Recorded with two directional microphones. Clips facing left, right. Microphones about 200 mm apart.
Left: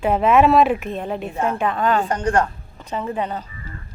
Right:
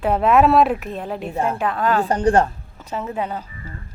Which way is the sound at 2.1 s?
35° right (ahead or behind).